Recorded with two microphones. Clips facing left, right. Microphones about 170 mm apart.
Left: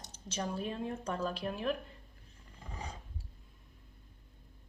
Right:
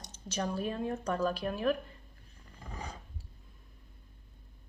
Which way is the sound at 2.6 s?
30° left (ahead or behind).